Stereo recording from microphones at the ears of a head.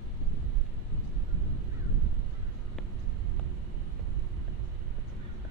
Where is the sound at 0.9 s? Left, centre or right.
Left.